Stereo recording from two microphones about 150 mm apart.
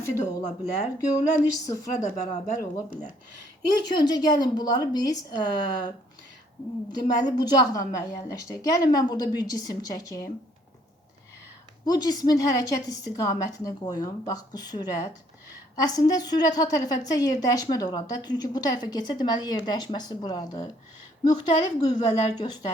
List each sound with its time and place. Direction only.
0.2 s speech: 50° left (ahead or behind)
1.6 s a woman's voice: 25° left (ahead or behind)
2.0 s speech: 50° left (ahead or behind)
3.8 s a woman's voice: 30° left (ahead or behind)
6.9 s a woman's voice: 25° left (ahead or behind)
11.9 s a woman's voice: 25° left (ahead or behind)